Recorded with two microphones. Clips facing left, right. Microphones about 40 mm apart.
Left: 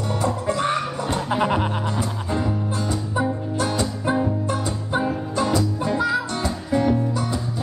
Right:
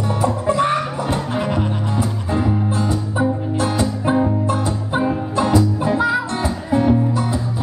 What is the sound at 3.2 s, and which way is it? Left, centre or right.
Music, centre.